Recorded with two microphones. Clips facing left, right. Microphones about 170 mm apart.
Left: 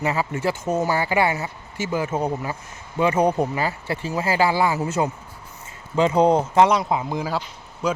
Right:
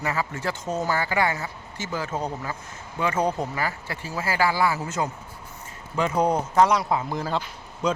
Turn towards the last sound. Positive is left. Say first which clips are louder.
# left 1 dB
turn(degrees=5)  # may be behind; listen again after turning